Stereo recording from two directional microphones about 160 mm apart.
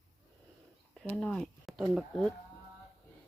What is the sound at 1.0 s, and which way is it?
Speech, 5° left (ahead or behind).